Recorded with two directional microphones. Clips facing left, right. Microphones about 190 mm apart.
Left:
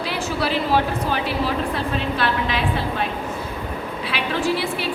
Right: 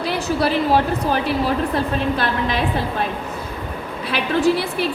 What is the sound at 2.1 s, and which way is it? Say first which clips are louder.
Speech: right 1 dB; 40° right (ahead or behind).